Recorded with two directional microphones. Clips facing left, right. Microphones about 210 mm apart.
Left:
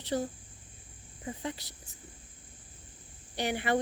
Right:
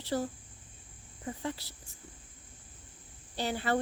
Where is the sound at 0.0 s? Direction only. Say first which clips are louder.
Left 1 dB; 20° left (ahead or behind).